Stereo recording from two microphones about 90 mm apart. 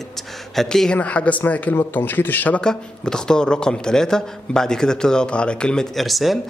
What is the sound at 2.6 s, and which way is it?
A man's voice, 5° left (ahead or behind).